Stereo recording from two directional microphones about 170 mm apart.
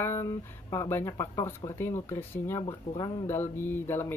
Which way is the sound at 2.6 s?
30° left (ahead or behind).